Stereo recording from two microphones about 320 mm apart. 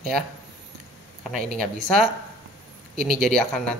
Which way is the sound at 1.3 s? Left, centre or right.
Right.